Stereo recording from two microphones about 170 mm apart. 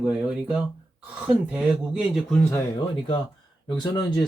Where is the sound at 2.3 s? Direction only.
10° left (ahead or behind).